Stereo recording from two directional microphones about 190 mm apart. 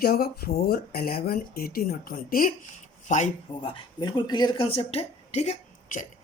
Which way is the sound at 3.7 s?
25° left (ahead or behind).